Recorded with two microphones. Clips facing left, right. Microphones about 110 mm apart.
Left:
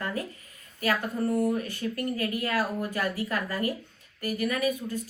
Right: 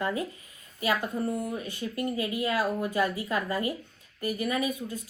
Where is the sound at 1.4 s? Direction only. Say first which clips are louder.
Left 6 dB; 15° right (ahead or behind).